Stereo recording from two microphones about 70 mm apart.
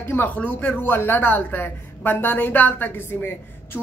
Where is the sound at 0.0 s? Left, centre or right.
Left.